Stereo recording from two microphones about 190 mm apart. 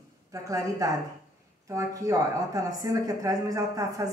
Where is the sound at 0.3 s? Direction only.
15° right (ahead or behind).